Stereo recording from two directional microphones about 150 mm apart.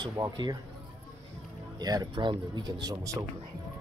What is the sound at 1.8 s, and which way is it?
Speech, 25° right (ahead or behind).